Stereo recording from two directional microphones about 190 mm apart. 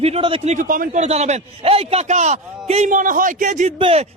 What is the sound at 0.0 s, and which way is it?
A man's voice, 30° right (ahead or behind).